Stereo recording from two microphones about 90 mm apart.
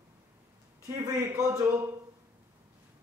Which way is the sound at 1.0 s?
35° right (ahead or behind).